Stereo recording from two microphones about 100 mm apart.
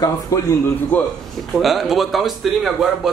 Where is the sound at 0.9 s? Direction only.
15° left (ahead or behind).